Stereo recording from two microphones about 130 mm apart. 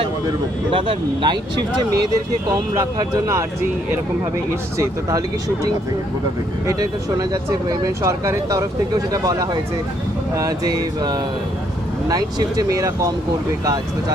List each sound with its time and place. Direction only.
0.0 s speech: 40° right (ahead or behind)
3.0 s speech: 25° right (ahead or behind)
6.7 s speech: 25° right (ahead or behind)